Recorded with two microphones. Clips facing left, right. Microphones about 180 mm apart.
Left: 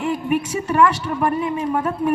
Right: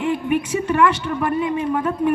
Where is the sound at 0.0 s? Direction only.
40° left (ahead or behind).